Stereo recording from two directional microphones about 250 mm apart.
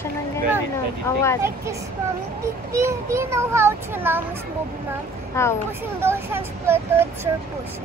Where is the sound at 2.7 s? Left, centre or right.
Centre.